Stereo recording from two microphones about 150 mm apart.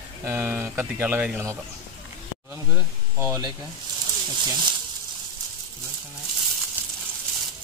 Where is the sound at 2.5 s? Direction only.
15° right (ahead or behind).